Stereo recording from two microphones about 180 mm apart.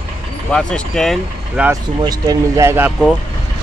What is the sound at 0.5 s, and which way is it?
Speech, 5° left (ahead or behind).